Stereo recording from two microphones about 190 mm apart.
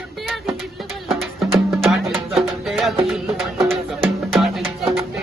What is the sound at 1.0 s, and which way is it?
Music, centre (ahead or behind).